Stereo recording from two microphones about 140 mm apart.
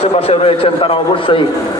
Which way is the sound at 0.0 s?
45° left (ahead or behind).